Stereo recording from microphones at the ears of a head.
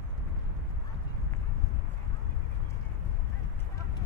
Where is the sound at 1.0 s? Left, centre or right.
Left.